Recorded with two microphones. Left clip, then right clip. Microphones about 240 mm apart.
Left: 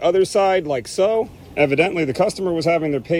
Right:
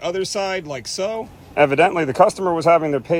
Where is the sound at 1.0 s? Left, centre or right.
Right.